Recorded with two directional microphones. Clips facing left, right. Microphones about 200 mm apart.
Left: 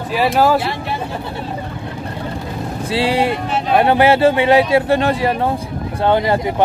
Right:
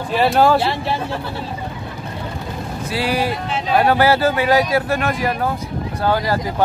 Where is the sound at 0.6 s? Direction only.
30° right (ahead or behind).